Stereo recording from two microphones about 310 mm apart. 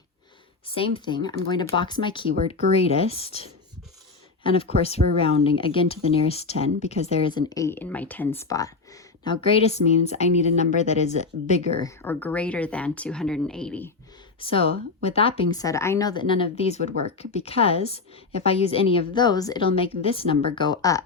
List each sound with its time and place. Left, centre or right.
0.8 s a woman's voice: centre
11.8 s speech: centre
14.3 s a woman's voice: centre